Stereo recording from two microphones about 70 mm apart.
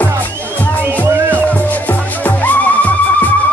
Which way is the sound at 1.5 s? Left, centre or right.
Left.